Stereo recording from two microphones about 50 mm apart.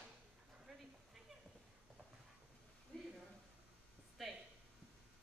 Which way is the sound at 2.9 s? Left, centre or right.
Centre.